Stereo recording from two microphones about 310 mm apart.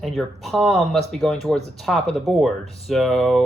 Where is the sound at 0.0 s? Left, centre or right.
Centre.